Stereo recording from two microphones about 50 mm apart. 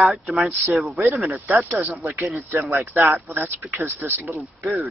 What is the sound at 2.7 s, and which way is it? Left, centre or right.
Speech, right.